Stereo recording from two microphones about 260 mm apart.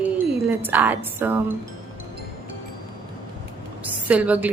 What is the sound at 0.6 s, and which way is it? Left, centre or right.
Speech, centre.